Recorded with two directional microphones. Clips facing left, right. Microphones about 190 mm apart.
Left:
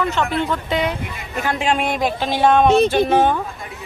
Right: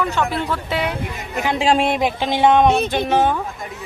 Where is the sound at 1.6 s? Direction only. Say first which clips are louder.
Right 4 dB; 30° right (ahead or behind); by 3.4 s 5° right (ahead or behind).